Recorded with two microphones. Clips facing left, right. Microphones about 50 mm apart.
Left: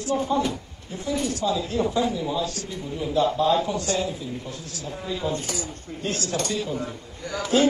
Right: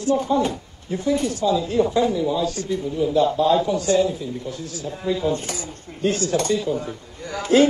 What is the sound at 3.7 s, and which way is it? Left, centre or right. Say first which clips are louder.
Speech: right 7 dB; centre.